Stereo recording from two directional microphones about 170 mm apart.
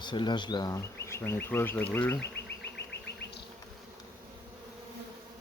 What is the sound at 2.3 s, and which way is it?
Insect, 85° left.